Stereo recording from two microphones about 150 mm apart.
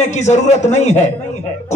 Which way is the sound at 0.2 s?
50° left (ahead or behind).